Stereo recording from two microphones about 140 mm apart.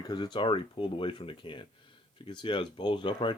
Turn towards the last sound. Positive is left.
turn(degrees=35)  # may be behind; listen again after turning